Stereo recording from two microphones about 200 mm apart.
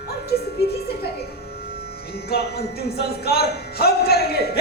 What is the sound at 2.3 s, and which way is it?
Speech, 55° left (ahead or behind).